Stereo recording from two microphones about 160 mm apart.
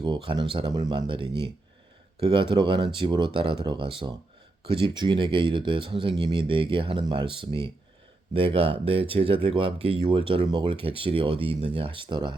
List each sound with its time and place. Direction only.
0.0 s speech: 30° right (ahead or behind)